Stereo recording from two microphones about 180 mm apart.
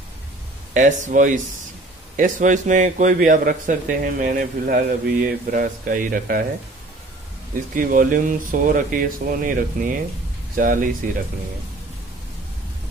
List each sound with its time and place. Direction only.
0.7 s a man's voice: 45° right (ahead or behind)
7.7 s a man's voice: 50° right (ahead or behind)